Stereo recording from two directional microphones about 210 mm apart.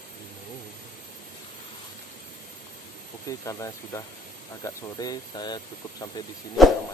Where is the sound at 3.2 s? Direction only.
15° left (ahead or behind).